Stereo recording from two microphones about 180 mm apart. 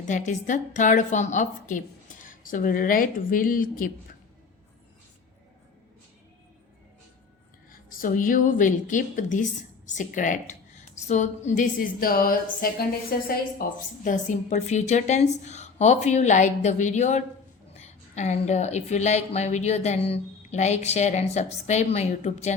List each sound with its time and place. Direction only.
0.1 s a woman's voice: 45° left (ahead or behind)
7.7 s a woman's voice: 50° left (ahead or behind)